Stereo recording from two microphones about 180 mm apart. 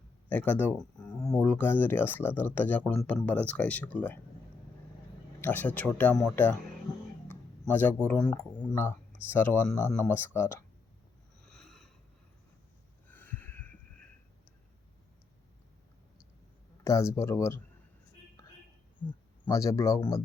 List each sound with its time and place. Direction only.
0.3 s speech: 10° left (ahead or behind)
5.4 s speech: 10° left (ahead or behind)
7.7 s speech: 10° left (ahead or behind)
11.4 s a sound: centre (ahead or behind)
13.1 s a sound: 10° left (ahead or behind)
16.8 s speech: 15° left (ahead or behind)
19.5 s speech: 15° left (ahead or behind)